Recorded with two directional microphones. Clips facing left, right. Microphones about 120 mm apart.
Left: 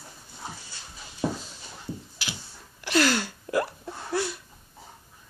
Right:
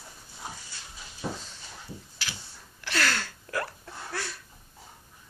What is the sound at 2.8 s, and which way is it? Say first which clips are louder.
Hiccup: left 6 dB; 15° left (ahead or behind).